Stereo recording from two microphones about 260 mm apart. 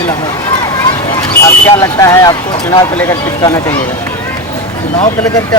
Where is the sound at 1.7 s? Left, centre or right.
Centre.